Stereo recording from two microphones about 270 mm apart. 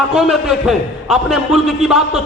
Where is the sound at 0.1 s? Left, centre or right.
Centre.